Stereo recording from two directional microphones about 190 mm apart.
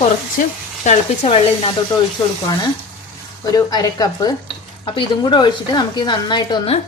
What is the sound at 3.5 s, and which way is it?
A woman's voice, 20° left (ahead or behind).